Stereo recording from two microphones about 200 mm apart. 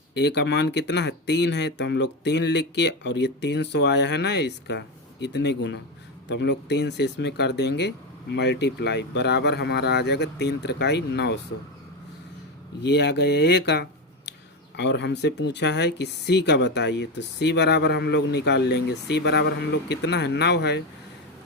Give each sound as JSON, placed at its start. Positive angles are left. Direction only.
{"t": 0.1, "sound": "speech", "side_deg": 55}
{"t": 12.8, "sound": "speech", "side_deg": 55}